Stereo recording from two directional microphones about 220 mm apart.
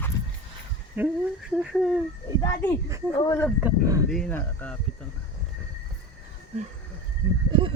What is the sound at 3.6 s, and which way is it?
Speech, 10° right (ahead or behind).